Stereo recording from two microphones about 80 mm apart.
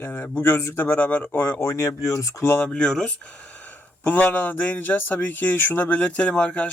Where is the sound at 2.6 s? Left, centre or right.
Centre.